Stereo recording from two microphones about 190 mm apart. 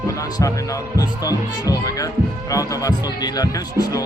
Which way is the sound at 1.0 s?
20° left (ahead or behind).